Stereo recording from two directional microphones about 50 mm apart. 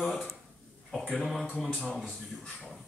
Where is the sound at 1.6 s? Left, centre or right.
Centre.